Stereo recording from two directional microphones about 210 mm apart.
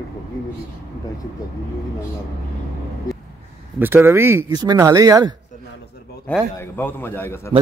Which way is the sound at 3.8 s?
10° right (ahead or behind).